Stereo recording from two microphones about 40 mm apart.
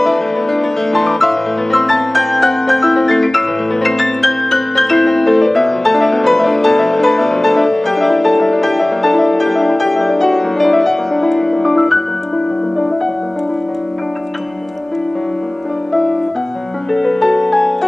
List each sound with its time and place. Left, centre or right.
0.0 s music: centre
15.9 s music: centre